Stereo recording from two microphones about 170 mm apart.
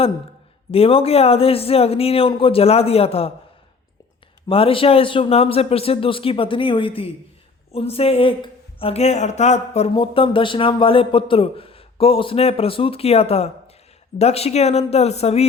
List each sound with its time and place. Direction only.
0.7 s speech: 35° left (ahead or behind)
4.4 s speech: 35° left (ahead or behind)